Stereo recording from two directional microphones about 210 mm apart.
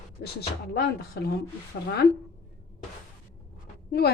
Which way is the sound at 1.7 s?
55° left (ahead or behind).